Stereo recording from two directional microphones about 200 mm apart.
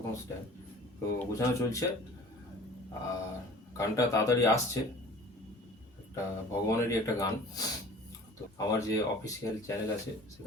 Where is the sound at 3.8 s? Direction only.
15° left (ahead or behind).